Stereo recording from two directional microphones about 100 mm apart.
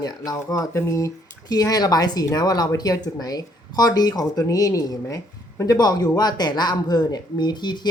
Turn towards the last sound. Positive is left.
turn(degrees=50)  # may be behind; listen again after turning